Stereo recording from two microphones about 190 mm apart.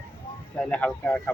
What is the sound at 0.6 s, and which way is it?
Speech, 5° left (ahead or behind).